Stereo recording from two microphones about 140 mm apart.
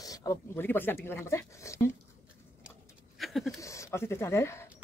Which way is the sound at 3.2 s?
Centre (ahead or behind).